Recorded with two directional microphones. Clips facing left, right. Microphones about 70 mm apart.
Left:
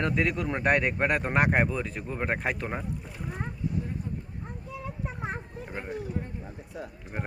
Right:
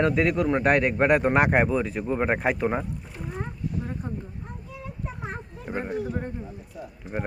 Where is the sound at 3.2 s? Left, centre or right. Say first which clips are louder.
Right 4 dB; centre.